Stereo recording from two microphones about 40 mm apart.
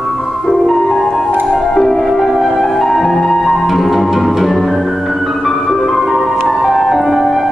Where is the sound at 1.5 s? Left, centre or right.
Left.